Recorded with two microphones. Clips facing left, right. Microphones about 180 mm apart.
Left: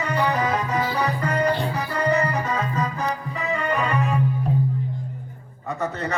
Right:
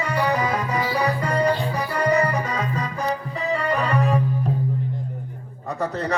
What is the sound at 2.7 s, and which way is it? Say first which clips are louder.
Music: even; 35° right (ahead or behind).